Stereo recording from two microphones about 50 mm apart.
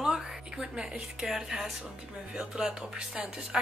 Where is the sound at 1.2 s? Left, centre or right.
Centre.